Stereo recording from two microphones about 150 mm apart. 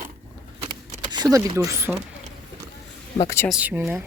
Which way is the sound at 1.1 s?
25° right (ahead or behind).